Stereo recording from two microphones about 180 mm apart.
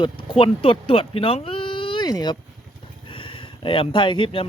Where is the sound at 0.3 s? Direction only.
30° left (ahead or behind).